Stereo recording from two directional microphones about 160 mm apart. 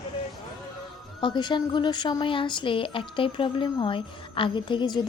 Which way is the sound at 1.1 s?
30° left (ahead or behind).